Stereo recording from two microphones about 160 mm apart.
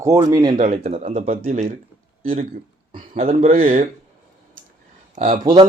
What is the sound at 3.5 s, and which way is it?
Speech, 55° right (ahead or behind).